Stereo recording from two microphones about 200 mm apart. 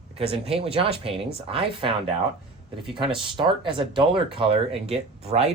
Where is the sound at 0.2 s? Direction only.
30° right (ahead or behind).